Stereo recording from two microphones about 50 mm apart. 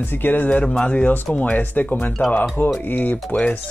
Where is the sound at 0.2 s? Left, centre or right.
Left.